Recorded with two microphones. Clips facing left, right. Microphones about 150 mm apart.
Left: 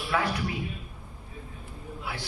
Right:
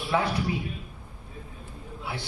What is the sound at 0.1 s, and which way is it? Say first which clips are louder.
Speech: right 2 dB; 20° right (ahead or behind).